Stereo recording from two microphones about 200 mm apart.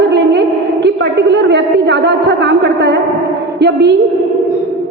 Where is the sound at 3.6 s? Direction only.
55° right (ahead or behind).